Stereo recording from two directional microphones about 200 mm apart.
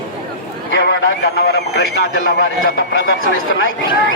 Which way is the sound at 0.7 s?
60° left (ahead or behind).